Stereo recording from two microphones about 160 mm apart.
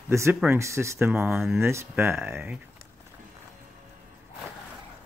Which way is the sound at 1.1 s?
5° right (ahead or behind).